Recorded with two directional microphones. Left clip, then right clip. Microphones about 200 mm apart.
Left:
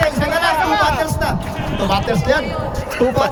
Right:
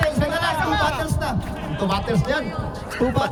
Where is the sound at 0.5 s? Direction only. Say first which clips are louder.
Left 6 dB; 30° right (ahead or behind).